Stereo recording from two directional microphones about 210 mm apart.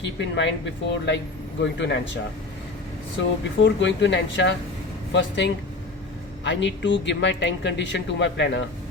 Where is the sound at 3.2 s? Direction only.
60° left (ahead or behind).